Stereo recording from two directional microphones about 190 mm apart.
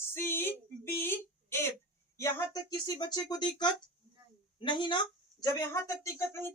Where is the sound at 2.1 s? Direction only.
15° left (ahead or behind).